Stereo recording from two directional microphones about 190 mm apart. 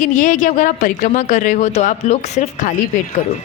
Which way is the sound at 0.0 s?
40° left (ahead or behind).